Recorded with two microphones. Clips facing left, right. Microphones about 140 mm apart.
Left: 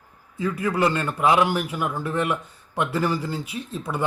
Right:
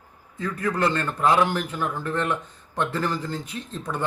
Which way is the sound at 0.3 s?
10° left (ahead or behind).